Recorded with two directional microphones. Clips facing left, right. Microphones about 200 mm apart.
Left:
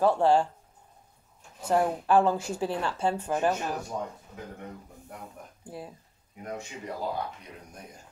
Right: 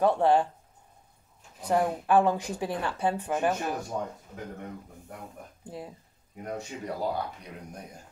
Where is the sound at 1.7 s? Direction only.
15° right (ahead or behind).